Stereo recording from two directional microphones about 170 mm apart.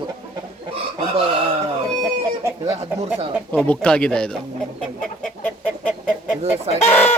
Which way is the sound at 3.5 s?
5° left (ahead or behind).